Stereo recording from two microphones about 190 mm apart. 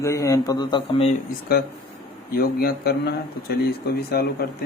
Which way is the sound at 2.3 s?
55° left (ahead or behind).